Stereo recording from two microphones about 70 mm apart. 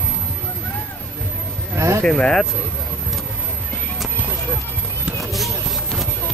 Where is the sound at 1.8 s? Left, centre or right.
Right.